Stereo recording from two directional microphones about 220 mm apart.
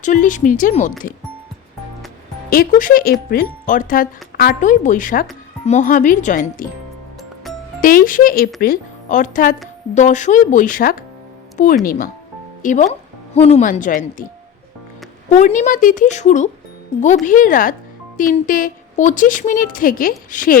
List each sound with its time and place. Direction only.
0.0 s speech: 35° left (ahead or behind)
2.5 s speech: 40° left (ahead or behind)
7.8 s speech: 40° left (ahead or behind)
15.3 s speech: 30° left (ahead or behind)